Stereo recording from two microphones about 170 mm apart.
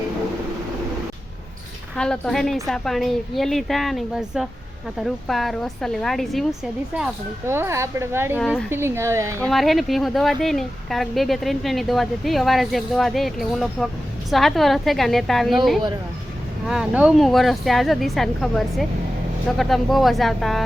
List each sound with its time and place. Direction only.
2.0 s speech: 5° left (ahead or behind)
7.4 s speech: 15° right (ahead or behind)
8.4 s speech: 5° left (ahead or behind)
8.7 s speech: 15° right (ahead or behind)
9.5 s speech: centre (ahead or behind)